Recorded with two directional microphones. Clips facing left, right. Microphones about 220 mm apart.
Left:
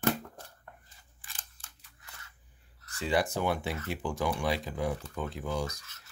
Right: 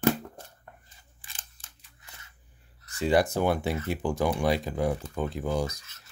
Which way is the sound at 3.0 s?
45° right (ahead or behind).